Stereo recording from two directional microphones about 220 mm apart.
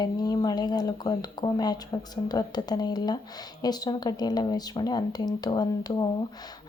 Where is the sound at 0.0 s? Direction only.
20° left (ahead or behind).